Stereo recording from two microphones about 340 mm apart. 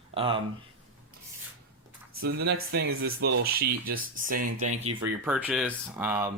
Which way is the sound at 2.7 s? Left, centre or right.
Right.